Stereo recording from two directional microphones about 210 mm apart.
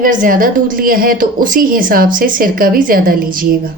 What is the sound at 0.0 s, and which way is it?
A woman's voice, 40° right (ahead or behind).